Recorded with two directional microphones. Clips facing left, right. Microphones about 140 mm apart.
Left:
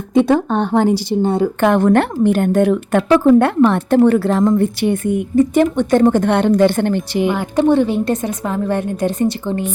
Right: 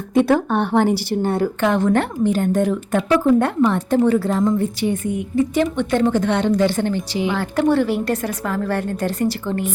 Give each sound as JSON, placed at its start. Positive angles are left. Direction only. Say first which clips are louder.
{"t": 0.1, "sound": "a woman's voice", "louder": "left 3 dB", "side_deg": 20}
{"t": 1.6, "sound": "a woman's voice", "louder": "left 5 dB", "side_deg": 55}
{"t": 5.4, "sound": "a woman's voice", "louder": "left 5 dB", "side_deg": 45}
{"t": 7.3, "sound": "a woman's voice", "louder": "left 3 dB", "side_deg": 20}